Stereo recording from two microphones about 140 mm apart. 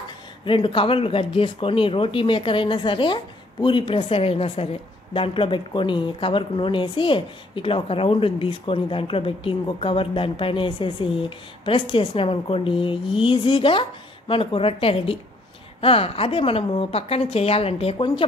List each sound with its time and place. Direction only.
0.5 s a woman's voice: 40° left (ahead or behind)